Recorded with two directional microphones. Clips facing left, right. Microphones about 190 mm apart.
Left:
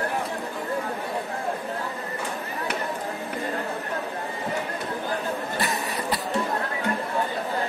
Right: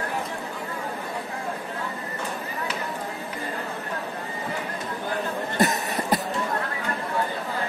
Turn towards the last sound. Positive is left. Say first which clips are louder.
# right 2 dB
turn(degrees=-45)  # may be behind; listen again after turning